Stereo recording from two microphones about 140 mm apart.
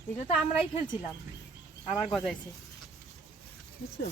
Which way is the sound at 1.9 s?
Centre (ahead or behind).